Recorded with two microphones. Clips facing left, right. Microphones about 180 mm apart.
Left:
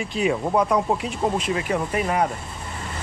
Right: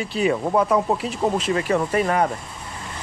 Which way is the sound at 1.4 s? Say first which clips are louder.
Right 3 dB; 35° right (ahead or behind).